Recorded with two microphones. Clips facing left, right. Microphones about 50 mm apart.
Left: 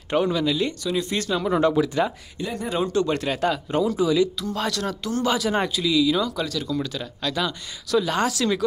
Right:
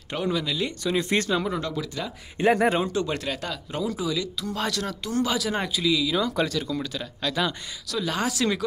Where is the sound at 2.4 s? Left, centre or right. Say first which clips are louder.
Right 10 dB; right.